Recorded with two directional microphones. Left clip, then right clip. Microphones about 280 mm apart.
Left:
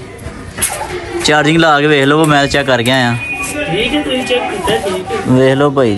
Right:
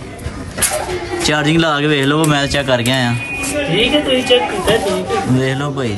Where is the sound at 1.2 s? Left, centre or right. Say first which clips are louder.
Left 6 dB; centre.